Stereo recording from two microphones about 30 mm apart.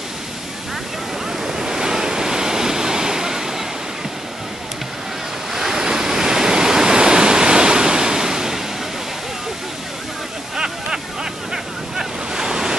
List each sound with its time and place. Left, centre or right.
1.4 s waves: centre
5.5 s waves: centre
10.5 s a sound: right
11.5 s waves: right